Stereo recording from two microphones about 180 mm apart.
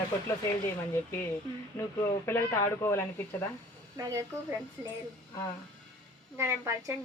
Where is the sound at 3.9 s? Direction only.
15° right (ahead or behind).